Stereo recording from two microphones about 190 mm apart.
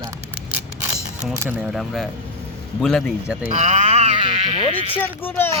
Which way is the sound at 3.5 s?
35° right (ahead or behind).